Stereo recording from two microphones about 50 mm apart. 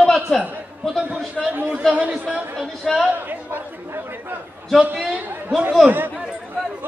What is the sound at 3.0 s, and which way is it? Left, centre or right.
Chatter, right.